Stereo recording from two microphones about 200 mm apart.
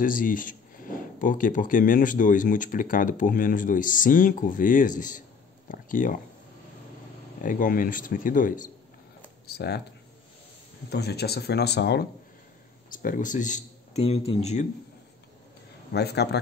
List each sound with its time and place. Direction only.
0.0 s speech: 45° left (ahead or behind)
7.4 s speech: 40° left (ahead or behind)
9.5 s speech: 55° left (ahead or behind)
10.9 s speech: 55° left (ahead or behind)
12.9 s speech: 45° left (ahead or behind)
15.9 s speech: 55° left (ahead or behind)